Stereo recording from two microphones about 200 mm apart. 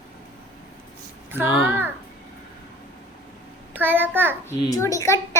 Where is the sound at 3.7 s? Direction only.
10° right (ahead or behind).